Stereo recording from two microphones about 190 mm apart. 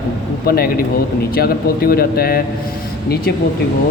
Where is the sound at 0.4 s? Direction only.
50° left (ahead or behind).